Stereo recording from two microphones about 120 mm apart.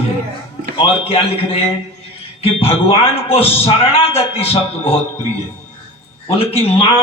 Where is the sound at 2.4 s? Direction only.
50° left (ahead or behind).